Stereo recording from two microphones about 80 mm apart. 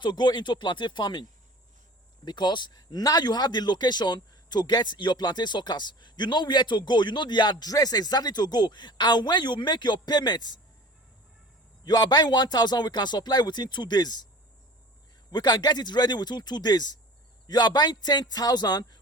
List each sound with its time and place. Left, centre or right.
0.0 s speech: left
2.2 s speech: left
11.9 s speech: left
15.3 s speech: left